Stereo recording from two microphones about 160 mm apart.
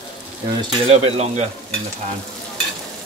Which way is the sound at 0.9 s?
40° right (ahead or behind).